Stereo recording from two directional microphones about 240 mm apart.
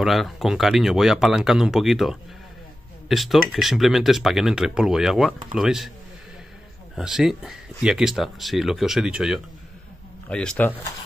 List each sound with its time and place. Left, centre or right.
0.0 s speech: centre
7.0 s speech: centre